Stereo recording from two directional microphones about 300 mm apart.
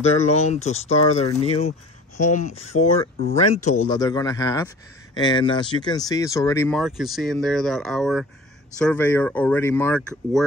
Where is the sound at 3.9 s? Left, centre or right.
Centre.